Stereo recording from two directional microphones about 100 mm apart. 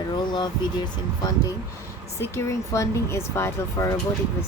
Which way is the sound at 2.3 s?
30° left (ahead or behind).